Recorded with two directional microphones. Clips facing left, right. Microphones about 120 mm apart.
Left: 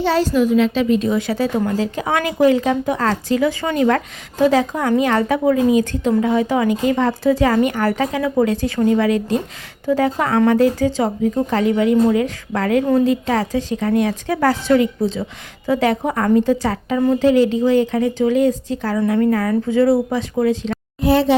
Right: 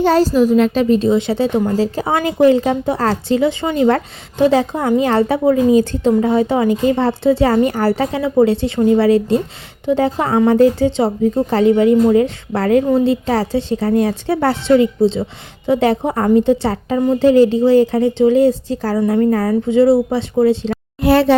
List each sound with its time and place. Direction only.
0.0 s a woman's voice: 40° right (ahead or behind)
21.0 s speech: 70° right (ahead or behind)